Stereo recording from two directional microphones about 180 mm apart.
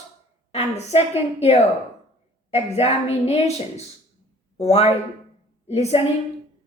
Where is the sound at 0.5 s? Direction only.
35° left (ahead or behind).